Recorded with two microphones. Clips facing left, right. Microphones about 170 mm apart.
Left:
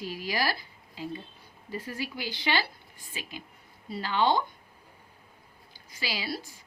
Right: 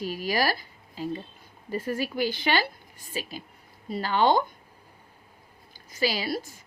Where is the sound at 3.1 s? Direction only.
35° right (ahead or behind).